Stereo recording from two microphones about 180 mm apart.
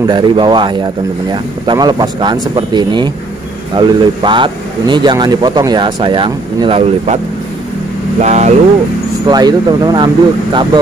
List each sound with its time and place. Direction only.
0.0 s speech: 25° right (ahead or behind)
8.2 s speech: 40° right (ahead or behind)
9.3 s speech: 20° right (ahead or behind)